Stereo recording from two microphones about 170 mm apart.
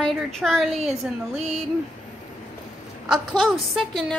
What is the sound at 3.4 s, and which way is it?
Speech, centre (ahead or behind).